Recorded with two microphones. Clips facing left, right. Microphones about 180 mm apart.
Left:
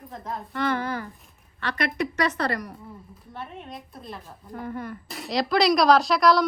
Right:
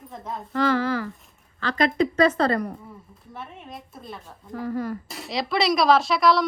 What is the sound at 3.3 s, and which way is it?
A woman's voice, centre (ahead or behind).